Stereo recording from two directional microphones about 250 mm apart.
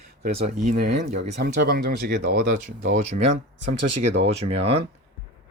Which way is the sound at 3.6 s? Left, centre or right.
Right.